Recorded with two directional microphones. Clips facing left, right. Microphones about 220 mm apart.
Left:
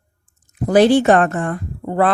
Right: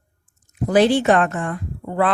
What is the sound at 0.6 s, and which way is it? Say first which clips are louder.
Speech: left 3 dB; 40° left (ahead or behind).